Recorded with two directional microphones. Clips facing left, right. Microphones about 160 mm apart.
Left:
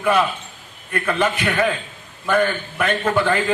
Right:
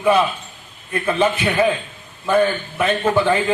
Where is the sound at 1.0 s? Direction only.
25° right (ahead or behind).